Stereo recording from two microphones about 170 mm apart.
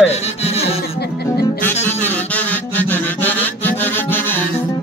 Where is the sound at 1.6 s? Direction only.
15° left (ahead or behind).